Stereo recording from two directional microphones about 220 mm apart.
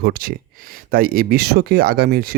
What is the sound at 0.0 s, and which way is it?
Speech, 45° right (ahead or behind).